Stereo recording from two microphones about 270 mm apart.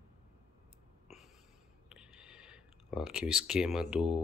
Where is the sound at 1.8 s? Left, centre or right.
Centre.